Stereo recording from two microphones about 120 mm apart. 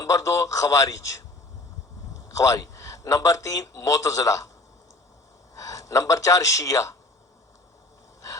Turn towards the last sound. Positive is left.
turn(degrees=30)  # may be behind; listen again after turning